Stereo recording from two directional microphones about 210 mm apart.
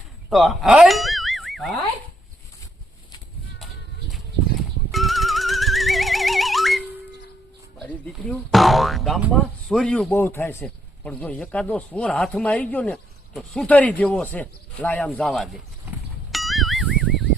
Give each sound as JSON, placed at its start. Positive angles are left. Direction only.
{"t": 0.3, "sound": "speech", "side_deg": 0}
{"t": 4.9, "sound": "music", "side_deg": 0}
{"t": 7.8, "sound": "speech", "side_deg": 5}
{"t": 16.3, "sound": "music", "side_deg": 0}